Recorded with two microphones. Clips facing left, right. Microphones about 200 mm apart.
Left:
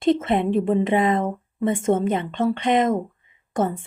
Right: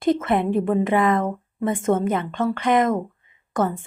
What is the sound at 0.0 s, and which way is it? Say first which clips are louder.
Speech: left 1 dB; 20° left (ahead or behind).